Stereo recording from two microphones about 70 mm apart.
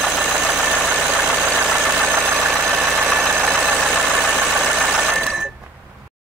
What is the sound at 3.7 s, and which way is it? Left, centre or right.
Engine, centre.